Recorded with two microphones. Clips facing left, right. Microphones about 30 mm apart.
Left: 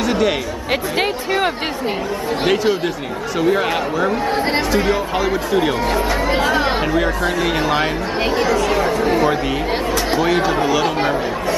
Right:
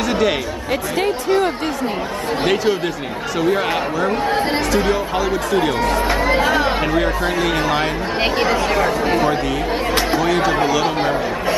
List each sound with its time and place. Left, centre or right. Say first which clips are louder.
0.0 s chatter: even; centre
0.9 s speech: right 4 dB; left
2.4 s speech: left 1 dB; centre
8.4 s speech: left 1 dB; right
8.7 s chatter: even; centre
10.1 s speech: left 1 dB; centre